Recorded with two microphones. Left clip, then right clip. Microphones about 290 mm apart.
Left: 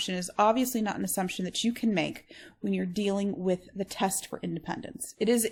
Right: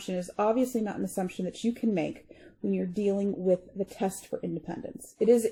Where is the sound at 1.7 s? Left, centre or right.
Left.